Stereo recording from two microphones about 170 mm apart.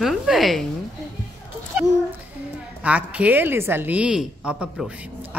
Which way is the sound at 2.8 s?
10° right (ahead or behind).